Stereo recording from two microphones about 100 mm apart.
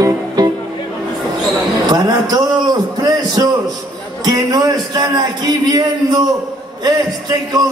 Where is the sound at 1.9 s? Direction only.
45° right (ahead or behind).